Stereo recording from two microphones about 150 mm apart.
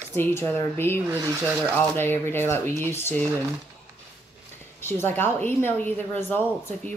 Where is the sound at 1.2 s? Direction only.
20° right (ahead or behind).